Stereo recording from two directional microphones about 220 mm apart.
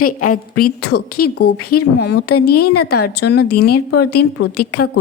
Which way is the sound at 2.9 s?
45° left (ahead or behind).